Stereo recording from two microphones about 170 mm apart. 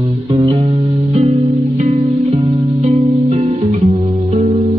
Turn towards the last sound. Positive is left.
turn(degrees=-40)  # may be behind; listen again after turning